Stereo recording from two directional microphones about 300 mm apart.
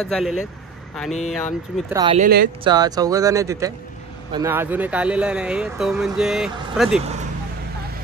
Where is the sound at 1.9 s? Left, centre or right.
Centre.